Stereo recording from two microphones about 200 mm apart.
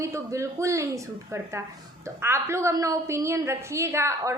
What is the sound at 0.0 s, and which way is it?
Speech, 15° right (ahead or behind).